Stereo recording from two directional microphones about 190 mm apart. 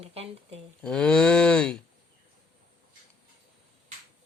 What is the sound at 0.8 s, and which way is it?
Cattle, 5° left (ahead or behind).